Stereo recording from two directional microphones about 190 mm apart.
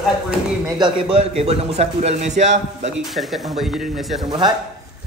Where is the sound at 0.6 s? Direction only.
20° right (ahead or behind); by 2.8 s 40° right (ahead or behind).